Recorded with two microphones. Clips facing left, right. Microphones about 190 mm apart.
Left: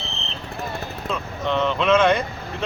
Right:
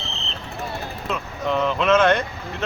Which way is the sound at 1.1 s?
5° right (ahead or behind).